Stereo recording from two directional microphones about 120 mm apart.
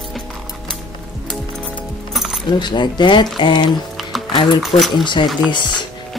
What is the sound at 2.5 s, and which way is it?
Speech, 40° left (ahead or behind).